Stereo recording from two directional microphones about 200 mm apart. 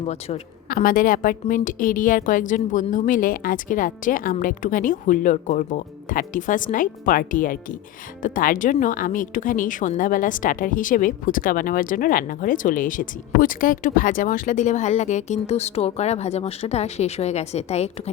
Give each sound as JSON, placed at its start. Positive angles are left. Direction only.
{"t": 0.0, "sound": "speech", "side_deg": 30}
{"t": 0.7, "sound": "a woman's voice", "side_deg": 45}